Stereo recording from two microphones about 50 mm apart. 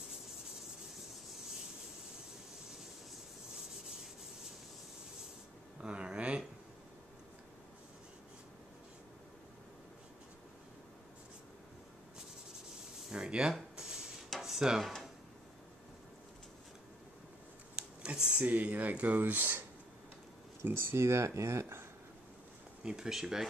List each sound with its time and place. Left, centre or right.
3.5 s rub: centre
5.8 s a sound: centre
13.1 s a sound: centre
13.7 s dishes: centre
14.8 s speech: centre
17.7 s a sound: centre
18.4 s speech: right
20.6 s speech: right
22.8 s speech: centre